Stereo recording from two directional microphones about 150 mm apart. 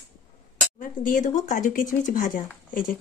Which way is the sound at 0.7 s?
60° left (ahead or behind).